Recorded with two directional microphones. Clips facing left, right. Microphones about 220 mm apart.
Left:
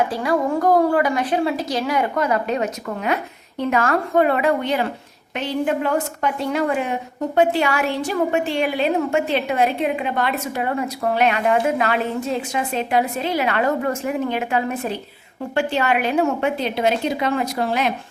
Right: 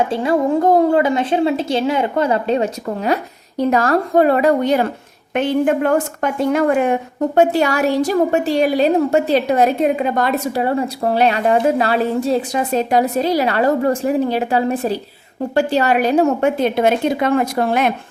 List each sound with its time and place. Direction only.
0.1 s a woman's voice: 25° right (ahead or behind); by 17.9 s 55° right (ahead or behind)